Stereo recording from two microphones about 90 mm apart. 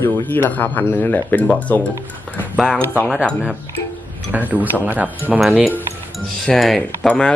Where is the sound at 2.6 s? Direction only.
5° left (ahead or behind).